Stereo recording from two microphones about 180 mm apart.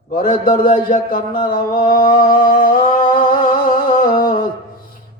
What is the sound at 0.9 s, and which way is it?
Speech, 50° left (ahead or behind).